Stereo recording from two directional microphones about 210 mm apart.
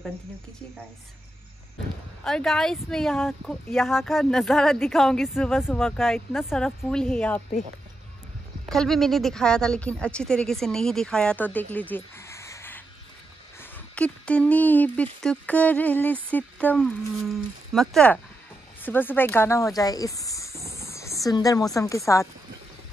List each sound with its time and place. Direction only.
2.2 s speech: centre (ahead or behind)
8.6 s speech: centre (ahead or behind)